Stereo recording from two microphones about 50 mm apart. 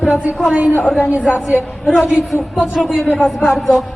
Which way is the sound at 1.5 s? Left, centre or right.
Centre.